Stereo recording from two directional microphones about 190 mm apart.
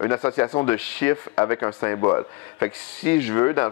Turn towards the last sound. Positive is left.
turn(degrees=15)  # may be behind; listen again after turning